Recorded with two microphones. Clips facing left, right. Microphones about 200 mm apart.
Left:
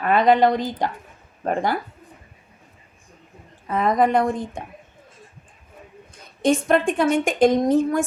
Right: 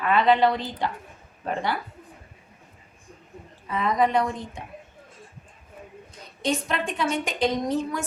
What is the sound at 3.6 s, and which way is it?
A woman's voice, 50° left (ahead or behind).